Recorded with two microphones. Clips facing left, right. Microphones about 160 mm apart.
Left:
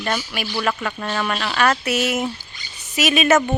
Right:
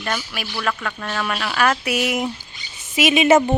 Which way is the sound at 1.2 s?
5° right (ahead or behind).